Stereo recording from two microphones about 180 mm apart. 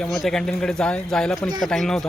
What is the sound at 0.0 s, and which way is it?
A man's voice, centre (ahead or behind).